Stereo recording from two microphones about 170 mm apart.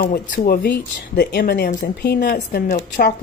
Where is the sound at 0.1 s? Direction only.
60° left (ahead or behind).